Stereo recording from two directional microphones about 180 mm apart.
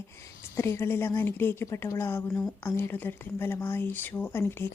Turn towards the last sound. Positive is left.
turn(degrees=15)  # may be behind; listen again after turning